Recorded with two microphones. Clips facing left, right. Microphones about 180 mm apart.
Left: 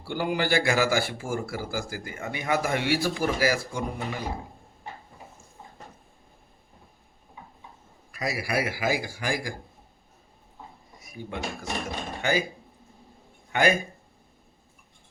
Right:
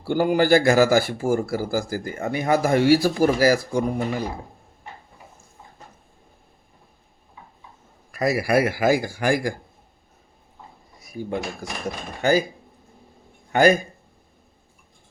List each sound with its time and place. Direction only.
0.0 s speech: 45° right (ahead or behind)
8.1 s a man's voice: 50° right (ahead or behind)
11.0 s speech: 35° right (ahead or behind)
13.5 s speech: 40° right (ahead or behind)